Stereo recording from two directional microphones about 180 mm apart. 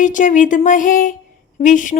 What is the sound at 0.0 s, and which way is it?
Music, 45° left (ahead or behind).